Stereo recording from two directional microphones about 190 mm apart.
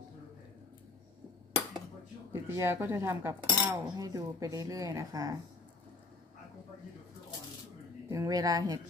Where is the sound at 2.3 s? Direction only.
15° right (ahead or behind).